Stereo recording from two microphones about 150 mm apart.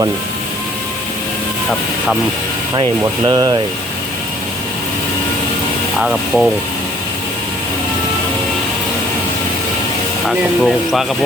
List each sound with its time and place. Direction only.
3.0 s speech: 25° right (ahead or behind)
6.0 s speech: 5° right (ahead or behind)
10.2 s speech: centre (ahead or behind)